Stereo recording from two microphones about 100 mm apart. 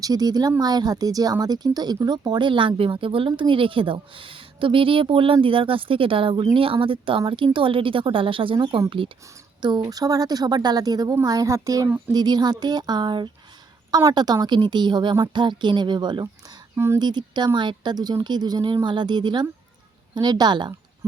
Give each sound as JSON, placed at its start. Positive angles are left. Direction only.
{"t": 0.0, "sound": "speech", "side_deg": -40}
{"t": 9.6, "sound": "speech", "side_deg": -45}
{"t": 16.7, "sound": "speech", "side_deg": -25}
{"t": 17.0, "sound": "speech", "side_deg": -45}